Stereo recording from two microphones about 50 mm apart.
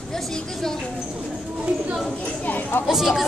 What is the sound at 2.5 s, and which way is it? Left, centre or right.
Chatter, left.